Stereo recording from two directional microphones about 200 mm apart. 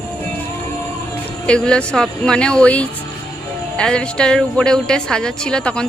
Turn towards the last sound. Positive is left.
turn(degrees=5)  # may be behind; listen again after turning